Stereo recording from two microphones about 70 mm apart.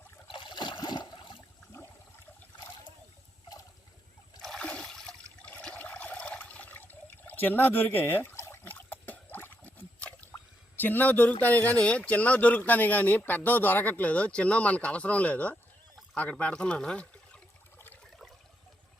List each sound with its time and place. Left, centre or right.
0.5 s water: left
1.7 s a sound: left
4.4 s toilet flush: centre
5.4 s water: centre
10.3 s speech: left